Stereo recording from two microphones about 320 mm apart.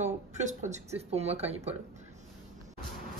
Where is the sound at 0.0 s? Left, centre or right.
Right.